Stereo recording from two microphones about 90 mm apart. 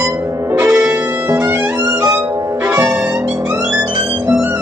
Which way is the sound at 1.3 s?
30° right (ahead or behind).